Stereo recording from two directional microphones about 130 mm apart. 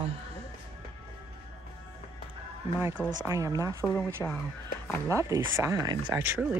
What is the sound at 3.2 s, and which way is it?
Speech, 25° right (ahead or behind).